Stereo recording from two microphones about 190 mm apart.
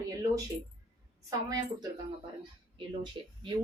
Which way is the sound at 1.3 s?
20° right (ahead or behind).